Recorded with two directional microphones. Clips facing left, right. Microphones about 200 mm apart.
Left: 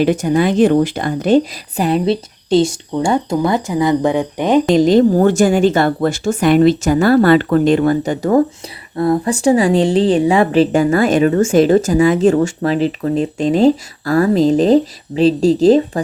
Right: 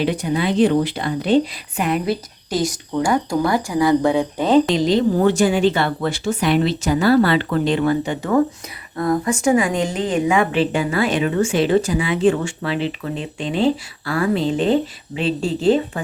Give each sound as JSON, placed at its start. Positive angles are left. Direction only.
{"t": 0.0, "sound": "speech", "side_deg": 45}
{"t": 4.7, "sound": "a woman's voice", "side_deg": 50}